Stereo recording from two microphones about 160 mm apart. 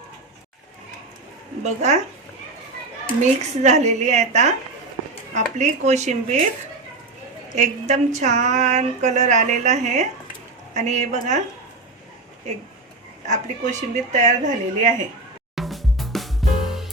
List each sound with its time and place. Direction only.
1.6 s speech: 45° right (ahead or behind)
3.2 s speech: 45° right (ahead or behind)
7.5 s speech: 50° right (ahead or behind)
13.2 s speech: 50° right (ahead or behind)
15.5 s music: centre (ahead or behind)